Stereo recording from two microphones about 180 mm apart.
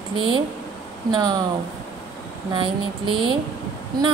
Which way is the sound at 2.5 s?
30° right (ahead or behind).